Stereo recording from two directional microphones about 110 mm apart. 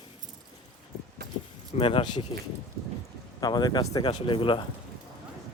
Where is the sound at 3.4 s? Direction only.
40° left (ahead or behind).